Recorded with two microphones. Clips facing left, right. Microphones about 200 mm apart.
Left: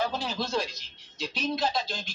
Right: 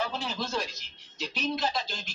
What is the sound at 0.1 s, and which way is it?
Speech, 35° left (ahead or behind).